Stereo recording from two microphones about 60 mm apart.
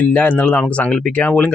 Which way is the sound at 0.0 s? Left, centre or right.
Left.